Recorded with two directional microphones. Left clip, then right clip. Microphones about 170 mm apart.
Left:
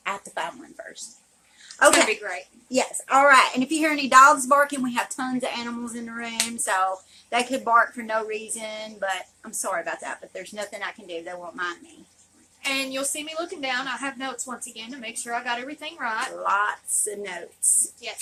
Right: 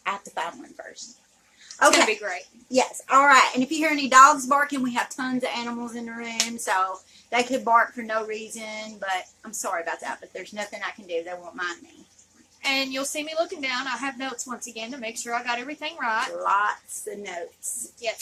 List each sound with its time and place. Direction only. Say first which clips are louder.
0.0 s a sound: even; 5° left (ahead or behind)
2.0 s a woman's voice: right 1 dB; 15° right (ahead or behind)
2.7 s a woman's voice: right 1 dB; 10° left (ahead or behind)
12.6 s a woman's voice: right 1 dB; 15° right (ahead or behind)
16.4 s a woman's voice: even; 5° left (ahead or behind)